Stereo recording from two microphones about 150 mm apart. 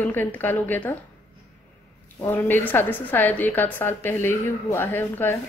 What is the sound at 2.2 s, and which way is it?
A woman's voice, 15° left (ahead or behind).